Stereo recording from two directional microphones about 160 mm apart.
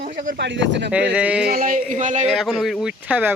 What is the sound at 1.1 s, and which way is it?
Speech, 5° right (ahead or behind).